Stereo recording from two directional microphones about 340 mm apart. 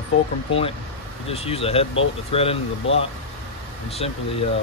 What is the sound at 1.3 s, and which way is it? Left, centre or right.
Speech, centre.